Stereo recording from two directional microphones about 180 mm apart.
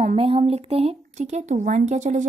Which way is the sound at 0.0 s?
35° right (ahead or behind).